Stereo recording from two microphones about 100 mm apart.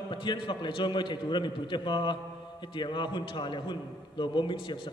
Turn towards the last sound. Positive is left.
turn(degrees=55)  # may be behind; listen again after turning